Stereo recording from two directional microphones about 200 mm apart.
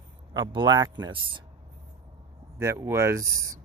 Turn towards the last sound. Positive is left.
turn(degrees=-15)  # may be behind; listen again after turning